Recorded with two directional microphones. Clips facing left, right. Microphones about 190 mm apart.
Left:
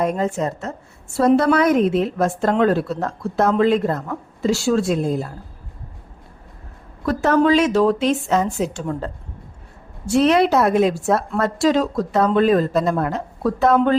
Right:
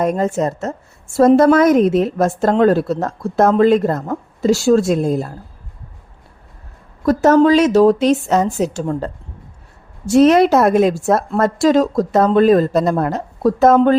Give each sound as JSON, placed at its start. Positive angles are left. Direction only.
{"t": 0.0, "sound": "a woman's voice", "side_deg": -45}
{"t": 7.0, "sound": "a woman's voice", "side_deg": -40}
{"t": 10.1, "sound": "a woman's voice", "side_deg": -45}